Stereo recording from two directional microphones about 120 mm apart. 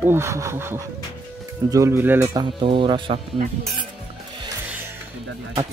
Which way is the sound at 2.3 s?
40° right (ahead or behind).